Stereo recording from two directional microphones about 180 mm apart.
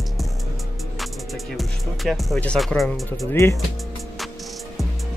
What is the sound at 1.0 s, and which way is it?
Speech, centre (ahead or behind).